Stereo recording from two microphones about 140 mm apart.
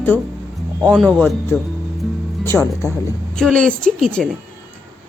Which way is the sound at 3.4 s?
5° left (ahead or behind).